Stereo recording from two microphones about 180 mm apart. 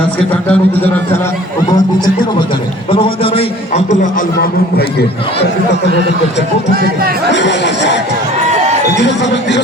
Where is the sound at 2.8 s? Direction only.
30° left (ahead or behind); by 5.1 s 60° left (ahead or behind).